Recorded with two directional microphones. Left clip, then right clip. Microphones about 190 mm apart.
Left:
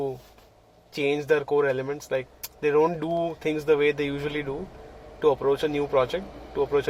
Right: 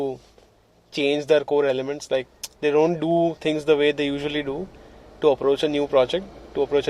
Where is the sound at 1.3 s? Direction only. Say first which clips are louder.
Right 4 dB; 35° right (ahead or behind).